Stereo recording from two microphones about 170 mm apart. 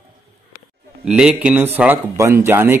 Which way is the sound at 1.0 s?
5° right (ahead or behind).